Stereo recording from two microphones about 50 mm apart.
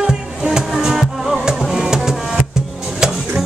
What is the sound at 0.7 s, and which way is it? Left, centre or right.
Music, centre.